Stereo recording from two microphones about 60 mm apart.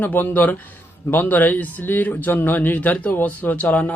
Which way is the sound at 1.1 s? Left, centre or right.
Left.